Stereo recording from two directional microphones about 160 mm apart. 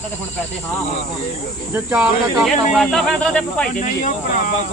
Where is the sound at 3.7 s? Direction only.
55° left (ahead or behind).